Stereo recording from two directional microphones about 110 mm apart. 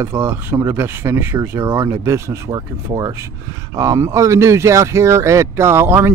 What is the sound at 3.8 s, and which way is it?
Speech, 30° right (ahead or behind).